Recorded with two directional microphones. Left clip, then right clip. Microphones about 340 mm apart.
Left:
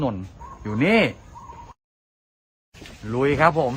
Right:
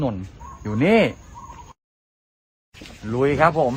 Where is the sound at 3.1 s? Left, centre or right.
Centre.